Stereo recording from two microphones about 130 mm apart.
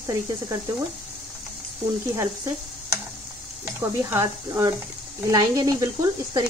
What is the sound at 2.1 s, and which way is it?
Speech, 25° right (ahead or behind).